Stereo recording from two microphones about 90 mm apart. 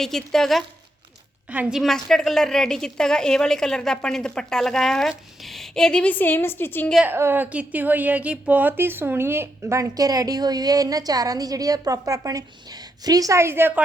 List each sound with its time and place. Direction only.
0.0 s speech: 5° left (ahead or behind)
1.7 s a woman's voice: centre (ahead or behind); by 6.8 s 25° left (ahead or behind)
7.1 s a woman's voice: 25° right (ahead or behind)
9.9 s a woman's voice: 45° right (ahead or behind); by 13.7 s 25° right (ahead or behind)